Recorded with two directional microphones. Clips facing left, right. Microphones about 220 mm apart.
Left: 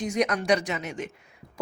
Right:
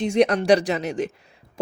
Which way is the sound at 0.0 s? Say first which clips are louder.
Right 7 dB; 30° right (ahead or behind).